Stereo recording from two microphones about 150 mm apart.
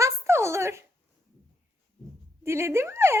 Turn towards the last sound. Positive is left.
turn(degrees=-15)  # may be behind; listen again after turning